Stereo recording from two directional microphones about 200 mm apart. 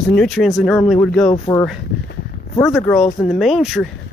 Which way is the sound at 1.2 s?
30° left (ahead or behind).